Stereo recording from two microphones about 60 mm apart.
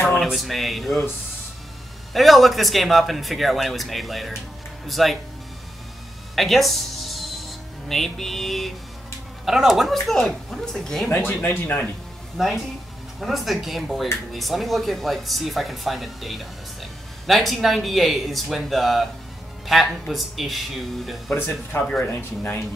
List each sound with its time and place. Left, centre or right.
0.2 s speech: centre
2.1 s speech: centre
6.3 s music: centre
9.4 s speech: centre
11.2 s speech: left
12.4 s speech: centre
21.4 s speech: left
22.0 s speech: left